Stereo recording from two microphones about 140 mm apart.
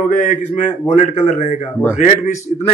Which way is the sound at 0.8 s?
50° left (ahead or behind).